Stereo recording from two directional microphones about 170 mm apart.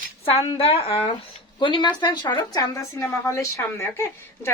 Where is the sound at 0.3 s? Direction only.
35° left (ahead or behind).